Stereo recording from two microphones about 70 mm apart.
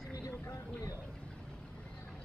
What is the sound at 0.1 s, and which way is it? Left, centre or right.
Vehicle, left.